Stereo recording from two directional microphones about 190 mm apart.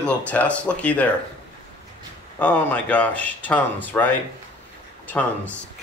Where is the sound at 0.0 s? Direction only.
5° left (ahead or behind).